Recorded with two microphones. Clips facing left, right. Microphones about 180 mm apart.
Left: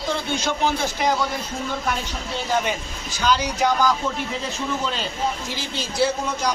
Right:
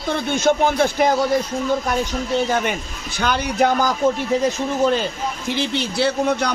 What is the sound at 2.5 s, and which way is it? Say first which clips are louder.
A man's voice: right 2 dB; 60° right (ahead or behind).